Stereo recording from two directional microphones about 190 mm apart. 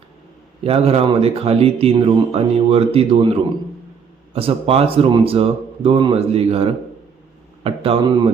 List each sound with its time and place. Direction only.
0.6 s speech: 30° right (ahead or behind)
4.4 s speech: 30° right (ahead or behind)